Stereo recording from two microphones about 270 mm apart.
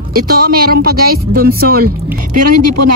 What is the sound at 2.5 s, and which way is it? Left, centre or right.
Speech, right.